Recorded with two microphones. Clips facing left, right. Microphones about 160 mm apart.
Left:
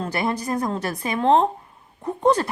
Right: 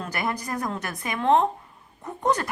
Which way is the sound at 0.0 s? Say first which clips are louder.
Left 5 dB; 30° left (ahead or behind).